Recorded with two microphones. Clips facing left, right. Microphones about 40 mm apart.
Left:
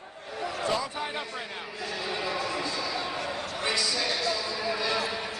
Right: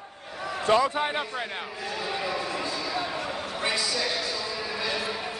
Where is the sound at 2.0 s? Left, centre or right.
Centre.